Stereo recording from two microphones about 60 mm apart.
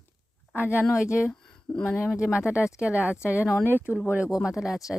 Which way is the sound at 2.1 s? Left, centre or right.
Centre.